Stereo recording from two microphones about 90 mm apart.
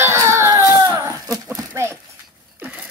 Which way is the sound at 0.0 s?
30° right (ahead or behind).